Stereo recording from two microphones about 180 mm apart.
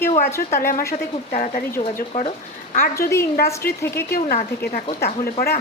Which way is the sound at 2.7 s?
50° left (ahead or behind).